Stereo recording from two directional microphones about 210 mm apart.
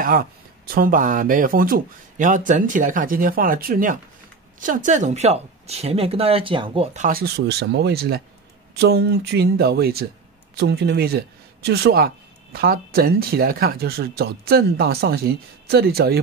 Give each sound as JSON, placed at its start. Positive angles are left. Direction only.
{"t": 0.0, "sound": "speech", "side_deg": -45}